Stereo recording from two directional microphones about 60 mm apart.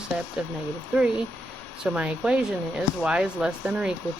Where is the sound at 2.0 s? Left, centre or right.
Centre.